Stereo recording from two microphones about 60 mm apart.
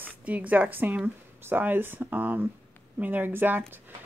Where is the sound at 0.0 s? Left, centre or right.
Right.